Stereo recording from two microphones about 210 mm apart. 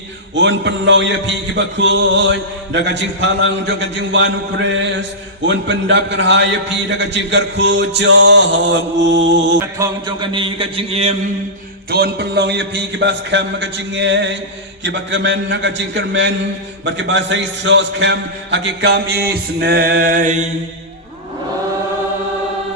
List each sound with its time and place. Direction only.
0.3 s a man's voice: 55° right (ahead or behind)
9.7 s a sound: 15° right (ahead or behind)
11.9 s a man's voice: 50° right (ahead or behind)